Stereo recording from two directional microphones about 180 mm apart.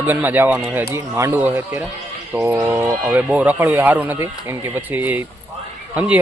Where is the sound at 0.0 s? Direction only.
10° right (ahead or behind).